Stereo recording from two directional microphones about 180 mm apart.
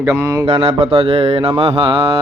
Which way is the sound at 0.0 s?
15° right (ahead or behind).